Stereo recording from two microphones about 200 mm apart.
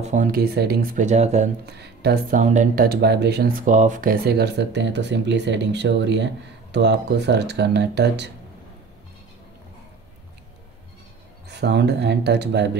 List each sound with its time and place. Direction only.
0.0 s speech: 40° right (ahead or behind)
1.7 s speech: 55° right (ahead or behind)
2.3 s speech: 35° right (ahead or behind); by 3.5 s 55° right (ahead or behind)
3.6 s speech: 40° right (ahead or behind); by 8.3 s 60° right (ahead or behind)
11.4 s speech: 60° right (ahead or behind)